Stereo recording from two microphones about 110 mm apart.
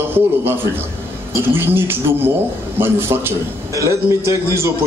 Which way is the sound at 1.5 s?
20° right (ahead or behind).